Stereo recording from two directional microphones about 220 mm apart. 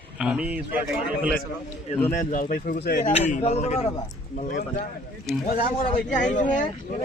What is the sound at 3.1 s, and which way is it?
A man's voice, 30° left (ahead or behind).